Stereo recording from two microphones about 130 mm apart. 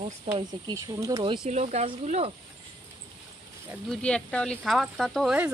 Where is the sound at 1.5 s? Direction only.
60° right (ahead or behind).